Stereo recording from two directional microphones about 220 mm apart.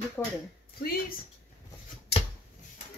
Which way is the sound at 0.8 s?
40° left (ahead or behind).